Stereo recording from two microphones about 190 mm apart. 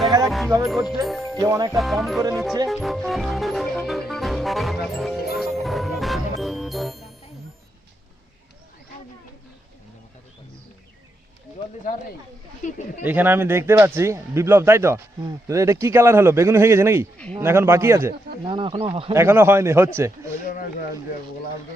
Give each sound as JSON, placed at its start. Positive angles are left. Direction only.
{"t": 0.6, "sound": "speech", "side_deg": 0}
{"t": 1.4, "sound": "speech", "side_deg": -20}
{"t": 1.7, "sound": "speech", "side_deg": 0}
{"t": 5.4, "sound": "music", "side_deg": 0}
{"t": 12.6, "sound": "speech", "side_deg": 40}
{"t": 13.1, "sound": "speech", "side_deg": -10}
{"t": 18.4, "sound": "speech", "side_deg": -25}
{"t": 19.1, "sound": "speech", "side_deg": -15}